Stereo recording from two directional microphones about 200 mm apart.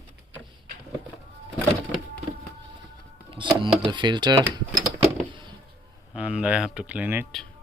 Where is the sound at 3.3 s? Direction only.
25° right (ahead or behind).